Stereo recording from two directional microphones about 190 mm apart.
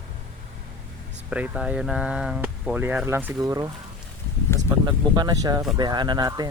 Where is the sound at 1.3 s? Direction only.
5° right (ahead or behind).